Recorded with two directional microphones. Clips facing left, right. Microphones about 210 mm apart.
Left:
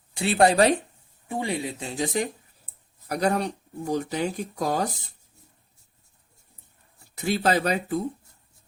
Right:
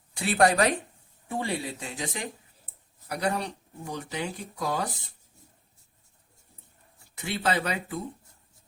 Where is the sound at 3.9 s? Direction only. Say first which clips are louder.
Left 7 dB; 40° left (ahead or behind).